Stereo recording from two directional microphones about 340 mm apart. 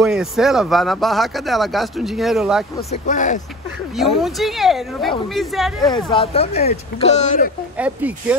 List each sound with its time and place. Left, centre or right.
0.0 s speech: centre
2.9 s speech: left
3.9 s speech: centre
5.9 s speech: centre
7.7 s speech: centre